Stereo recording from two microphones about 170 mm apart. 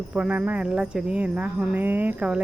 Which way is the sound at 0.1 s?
10° right (ahead or behind).